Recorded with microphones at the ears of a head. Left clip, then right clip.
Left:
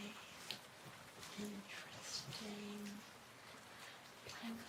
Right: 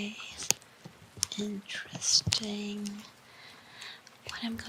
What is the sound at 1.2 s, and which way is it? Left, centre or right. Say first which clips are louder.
Speech: right 16 dB; right.